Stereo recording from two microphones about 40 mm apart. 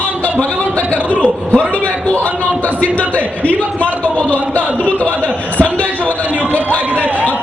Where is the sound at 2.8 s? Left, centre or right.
Left.